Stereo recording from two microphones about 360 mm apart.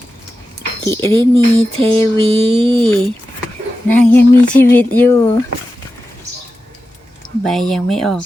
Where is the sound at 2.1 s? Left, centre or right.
Centre.